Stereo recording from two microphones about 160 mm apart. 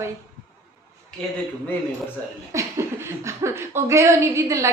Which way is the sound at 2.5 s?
20° right (ahead or behind).